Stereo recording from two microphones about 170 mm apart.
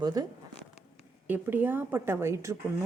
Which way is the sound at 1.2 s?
10° right (ahead or behind).